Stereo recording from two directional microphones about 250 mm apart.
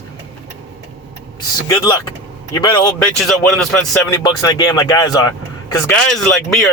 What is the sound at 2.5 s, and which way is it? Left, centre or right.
Speech, centre.